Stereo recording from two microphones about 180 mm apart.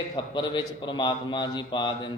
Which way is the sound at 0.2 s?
25° left (ahead or behind).